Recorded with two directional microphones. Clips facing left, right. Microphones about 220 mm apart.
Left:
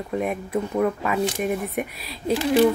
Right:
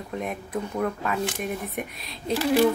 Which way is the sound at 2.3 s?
15° left (ahead or behind).